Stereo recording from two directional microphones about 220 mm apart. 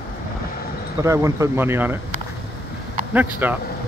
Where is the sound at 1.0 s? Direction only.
15° right (ahead or behind).